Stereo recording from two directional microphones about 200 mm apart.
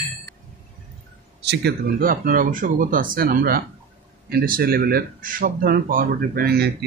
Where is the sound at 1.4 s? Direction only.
60° right (ahead or behind).